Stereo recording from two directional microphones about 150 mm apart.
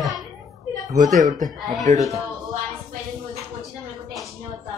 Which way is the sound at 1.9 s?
50° right (ahead or behind).